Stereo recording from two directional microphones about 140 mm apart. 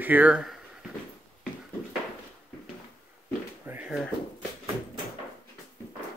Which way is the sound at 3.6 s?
15° right (ahead or behind).